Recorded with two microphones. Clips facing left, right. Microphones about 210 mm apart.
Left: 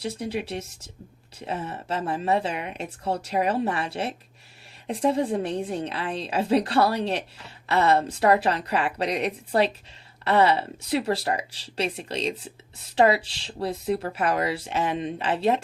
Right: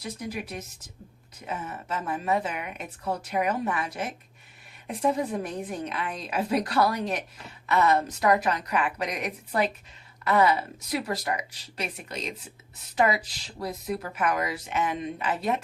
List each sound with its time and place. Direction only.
0.0 s a woman's voice: 30° left (ahead or behind)